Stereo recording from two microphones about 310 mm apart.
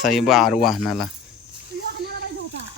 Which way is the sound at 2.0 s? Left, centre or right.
Right.